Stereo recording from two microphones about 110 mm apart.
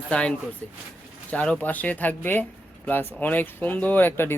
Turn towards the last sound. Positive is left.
turn(degrees=20)  # may be behind; listen again after turning